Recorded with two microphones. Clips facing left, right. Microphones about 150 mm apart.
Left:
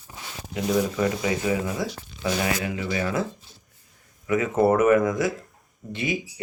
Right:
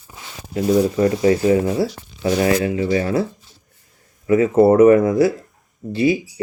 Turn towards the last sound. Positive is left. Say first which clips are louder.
# right 10 dB
turn(degrees=-30)  # may be behind; listen again after turning